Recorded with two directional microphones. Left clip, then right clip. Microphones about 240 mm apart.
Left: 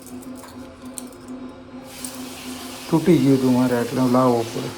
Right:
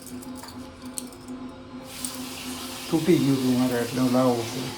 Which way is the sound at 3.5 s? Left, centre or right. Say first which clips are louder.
Left 5 dB; left.